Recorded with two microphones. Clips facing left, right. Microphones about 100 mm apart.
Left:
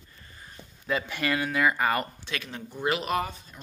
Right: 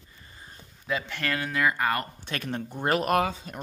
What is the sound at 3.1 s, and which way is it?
Speech, 80° right.